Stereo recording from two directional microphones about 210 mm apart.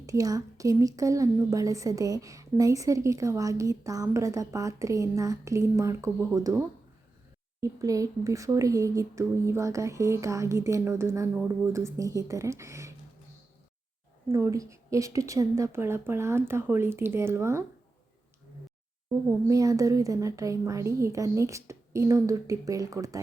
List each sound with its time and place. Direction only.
0.0 s a woman's voice: 15° right (ahead or behind)
14.3 s a woman's voice: 15° right (ahead or behind)
19.5 s a woman's voice: 15° right (ahead or behind)